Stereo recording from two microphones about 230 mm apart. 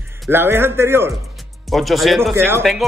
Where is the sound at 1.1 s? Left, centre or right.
Centre.